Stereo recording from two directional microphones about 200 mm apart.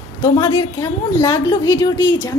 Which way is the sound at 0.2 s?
20° left (ahead or behind).